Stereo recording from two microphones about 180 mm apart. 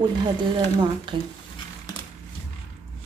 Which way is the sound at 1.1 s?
25° right (ahead or behind).